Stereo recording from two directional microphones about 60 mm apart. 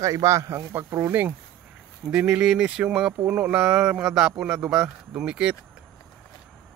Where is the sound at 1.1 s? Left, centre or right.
Right.